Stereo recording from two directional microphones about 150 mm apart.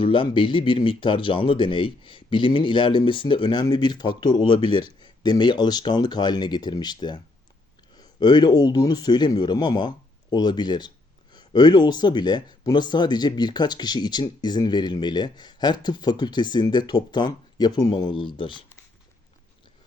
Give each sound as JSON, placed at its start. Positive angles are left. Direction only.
{"t": 0.0, "sound": "speech", "side_deg": 35}